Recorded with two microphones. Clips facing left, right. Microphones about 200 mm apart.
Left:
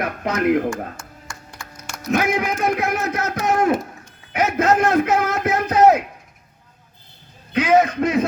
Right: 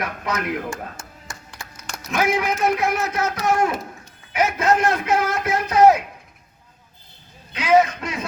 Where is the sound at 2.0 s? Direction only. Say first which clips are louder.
Left 1 dB; 55° left (ahead or behind).